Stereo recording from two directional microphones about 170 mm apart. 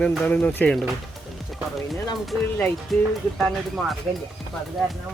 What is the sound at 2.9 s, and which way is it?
Speech, centre (ahead or behind).